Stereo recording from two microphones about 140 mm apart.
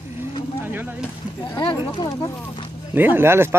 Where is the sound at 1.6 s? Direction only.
35° left (ahead or behind).